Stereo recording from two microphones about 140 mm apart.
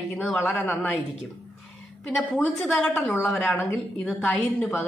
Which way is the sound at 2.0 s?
Centre (ahead or behind).